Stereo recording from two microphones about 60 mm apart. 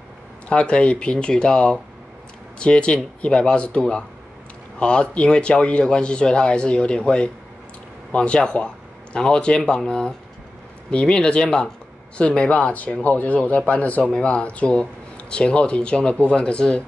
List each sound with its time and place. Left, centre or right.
0.5 s speech: centre